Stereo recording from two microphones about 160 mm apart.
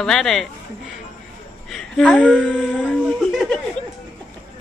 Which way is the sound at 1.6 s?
5° left (ahead or behind).